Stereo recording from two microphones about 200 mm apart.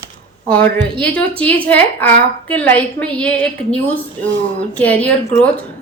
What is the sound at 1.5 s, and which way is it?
A woman's voice, 5° left (ahead or behind).